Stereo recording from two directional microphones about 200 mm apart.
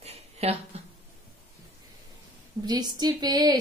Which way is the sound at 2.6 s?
20° right (ahead or behind).